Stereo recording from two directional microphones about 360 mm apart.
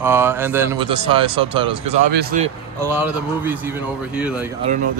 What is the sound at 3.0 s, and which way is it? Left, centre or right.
A man's voice, centre.